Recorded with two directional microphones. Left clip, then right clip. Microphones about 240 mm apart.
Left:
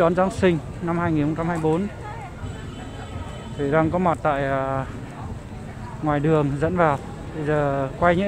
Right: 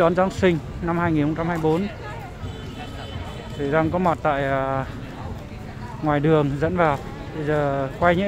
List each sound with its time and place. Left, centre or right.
0.0 s speech: centre
3.6 s speech: centre
6.0 s speech: centre